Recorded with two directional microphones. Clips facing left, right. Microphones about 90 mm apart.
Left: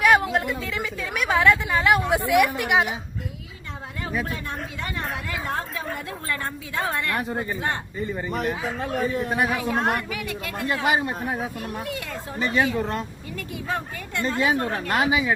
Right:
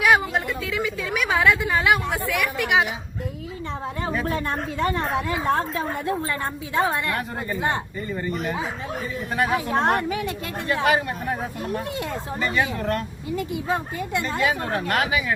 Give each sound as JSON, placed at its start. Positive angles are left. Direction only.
{"t": 0.0, "sound": "a woman's voice", "side_deg": 0}
{"t": 2.0, "sound": "a woman's voice", "side_deg": 15}
{"t": 2.6, "sound": "a woman's voice", "side_deg": 0}
{"t": 4.3, "sound": "a woman's voice", "side_deg": -40}
{"t": 7.2, "sound": "speech", "side_deg": 20}
{"t": 9.5, "sound": "a woman's voice", "side_deg": -20}
{"t": 10.8, "sound": "speech", "side_deg": 20}
{"t": 12.4, "sound": "speech", "side_deg": 20}
{"t": 13.3, "sound": "a woman's voice", "side_deg": -20}
{"t": 14.8, "sound": "speech", "side_deg": 20}